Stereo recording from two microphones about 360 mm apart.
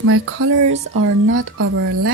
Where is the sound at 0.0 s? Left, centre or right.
Right.